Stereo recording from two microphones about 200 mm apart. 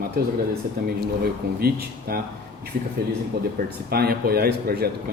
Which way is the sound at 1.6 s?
50° right (ahead or behind).